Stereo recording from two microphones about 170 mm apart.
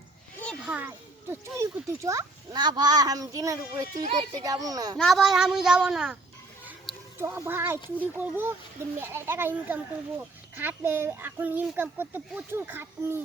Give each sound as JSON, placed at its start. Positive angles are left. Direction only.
{"t": 0.3, "sound": "a sound", "side_deg": 5}
{"t": 0.6, "sound": "a child's voice", "side_deg": -10}
{"t": 4.9, "sound": "a woman's voice", "side_deg": 0}
{"t": 7.2, "sound": "a child's voice", "side_deg": -15}